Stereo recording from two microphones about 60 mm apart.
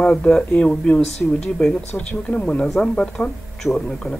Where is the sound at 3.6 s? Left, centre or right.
Centre.